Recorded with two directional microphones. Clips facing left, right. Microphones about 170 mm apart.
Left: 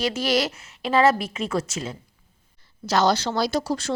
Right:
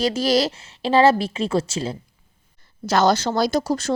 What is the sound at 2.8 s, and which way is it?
Speech, 50° right (ahead or behind).